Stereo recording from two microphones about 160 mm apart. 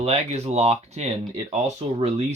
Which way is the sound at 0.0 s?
45° right (ahead or behind).